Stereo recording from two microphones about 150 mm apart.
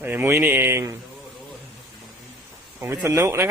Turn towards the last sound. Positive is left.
turn(degrees=-15)  # may be behind; listen again after turning